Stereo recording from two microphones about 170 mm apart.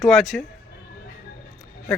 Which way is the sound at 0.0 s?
Centre (ahead or behind).